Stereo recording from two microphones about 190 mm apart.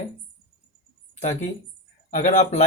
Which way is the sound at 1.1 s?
40° left (ahead or behind).